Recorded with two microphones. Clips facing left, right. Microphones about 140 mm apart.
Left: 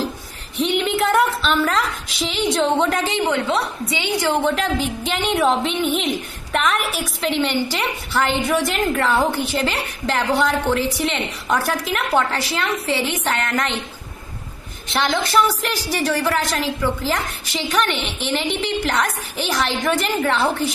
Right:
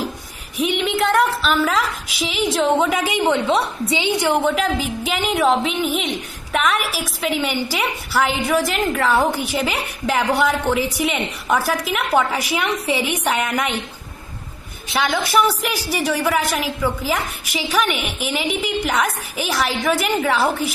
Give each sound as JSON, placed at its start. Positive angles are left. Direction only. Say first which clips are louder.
{"t": 0.7, "sound": "a woman's voice", "louder": "even", "side_deg": 0}
{"t": 3.1, "sound": "a woman's voice", "louder": "right 2 dB", "side_deg": -15}
{"t": 14.9, "sound": "a woman's voice", "louder": "even", "side_deg": 0}